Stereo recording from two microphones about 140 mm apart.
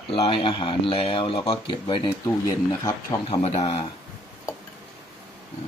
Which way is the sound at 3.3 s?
40° left (ahead or behind).